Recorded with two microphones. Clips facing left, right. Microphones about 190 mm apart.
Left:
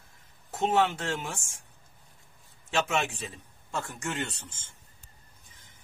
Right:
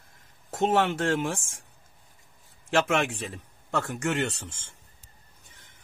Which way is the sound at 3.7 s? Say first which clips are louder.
Right 6 dB; 65° right (ahead or behind).